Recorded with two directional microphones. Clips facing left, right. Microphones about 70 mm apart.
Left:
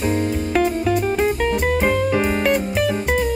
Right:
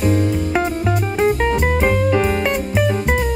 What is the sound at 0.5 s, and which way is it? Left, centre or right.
Music, centre.